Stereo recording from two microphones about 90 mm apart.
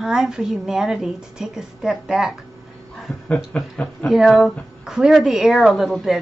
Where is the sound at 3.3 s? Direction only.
15° left (ahead or behind).